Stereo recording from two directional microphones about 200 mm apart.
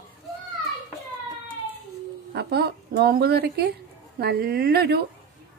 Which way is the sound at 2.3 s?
55° right (ahead or behind).